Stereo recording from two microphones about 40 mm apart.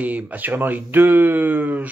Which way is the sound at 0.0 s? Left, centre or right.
Right.